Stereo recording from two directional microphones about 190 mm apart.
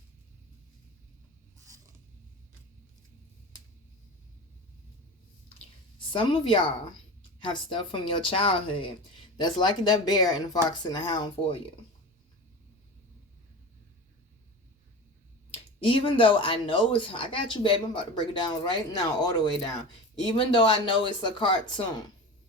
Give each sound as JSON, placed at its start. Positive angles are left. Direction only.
{"t": 1.5, "sound": "mechanisms", "side_deg": -15}
{"t": 6.1, "sound": "speech", "side_deg": 25}
{"t": 15.5, "sound": "speech", "side_deg": 30}